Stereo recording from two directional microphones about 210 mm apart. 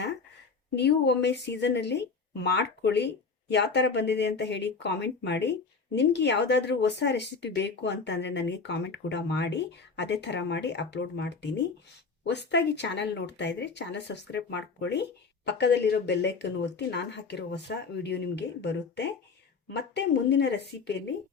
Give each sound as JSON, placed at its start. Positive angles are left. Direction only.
{"t": 0.8, "sound": "speech", "side_deg": 55}